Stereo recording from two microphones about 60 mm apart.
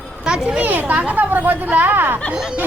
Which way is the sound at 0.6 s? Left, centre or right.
Right.